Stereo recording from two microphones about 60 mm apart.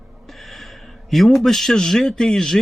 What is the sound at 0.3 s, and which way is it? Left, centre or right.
A man's voice, centre.